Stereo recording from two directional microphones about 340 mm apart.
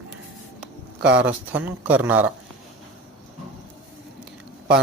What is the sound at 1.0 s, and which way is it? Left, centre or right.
Speech, right.